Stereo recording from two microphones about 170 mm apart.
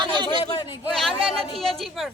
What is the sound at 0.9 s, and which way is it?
Speech, centre (ahead or behind).